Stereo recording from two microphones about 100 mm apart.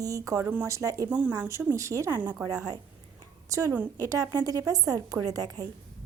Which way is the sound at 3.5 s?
30° right (ahead or behind).